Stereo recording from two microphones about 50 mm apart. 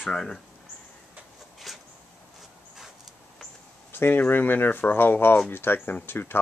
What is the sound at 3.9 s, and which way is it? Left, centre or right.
Speech, left.